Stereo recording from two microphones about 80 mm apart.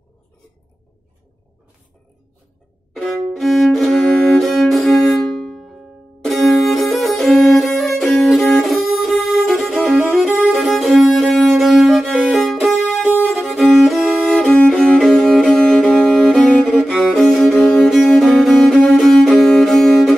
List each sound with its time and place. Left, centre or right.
3.0 s violin: centre
6.2 s music: centre
13.1 s violin: centre
13.5 s violin: centre
14.4 s violin: centre
14.7 s music: centre
15.8 s music: centre
16.1 s music: centre
17.1 s violin: centre
17.7 s music: centre